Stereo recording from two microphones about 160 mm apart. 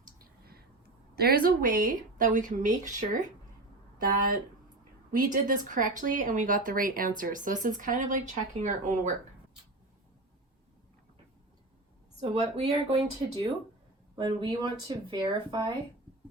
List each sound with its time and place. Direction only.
0.2 s a sound: 70° right (ahead or behind)
1.1 s speech: 75° right (ahead or behind); by 9.1 s 50° right (ahead or behind)
12.2 s speech: 40° right (ahead or behind)
14.2 s speech: 30° right (ahead or behind)